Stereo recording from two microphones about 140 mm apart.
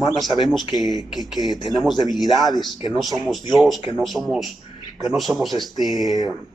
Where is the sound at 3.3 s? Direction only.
Centre (ahead or behind).